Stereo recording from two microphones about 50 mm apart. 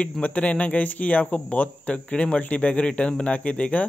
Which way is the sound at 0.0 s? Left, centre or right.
Left.